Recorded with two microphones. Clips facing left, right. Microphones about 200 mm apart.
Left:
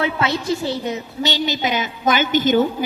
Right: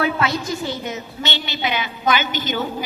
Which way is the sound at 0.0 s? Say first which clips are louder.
Even; 25° left (ahead or behind).